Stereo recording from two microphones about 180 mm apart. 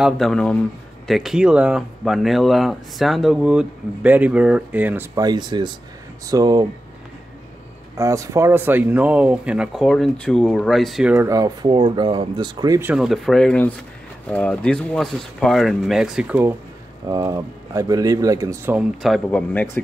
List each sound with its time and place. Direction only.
0.0 s speech: centre (ahead or behind)
5.1 s speech: 20° right (ahead or behind)
8.0 s speech: 15° right (ahead or behind)
12.9 s speech: centre (ahead or behind)
17.0 s speech: 20° right (ahead or behind)
18.8 s speech: centre (ahead or behind)